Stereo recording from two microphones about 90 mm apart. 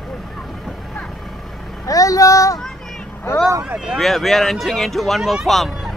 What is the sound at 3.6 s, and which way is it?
Speech, 15° right (ahead or behind).